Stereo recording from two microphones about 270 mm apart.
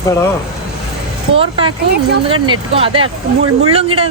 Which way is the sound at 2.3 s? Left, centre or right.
Centre.